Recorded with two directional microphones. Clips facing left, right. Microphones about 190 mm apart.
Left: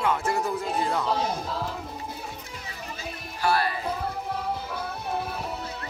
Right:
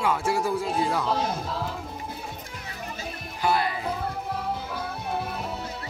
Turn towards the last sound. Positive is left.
turn(degrees=0)  # may be behind; listen again after turning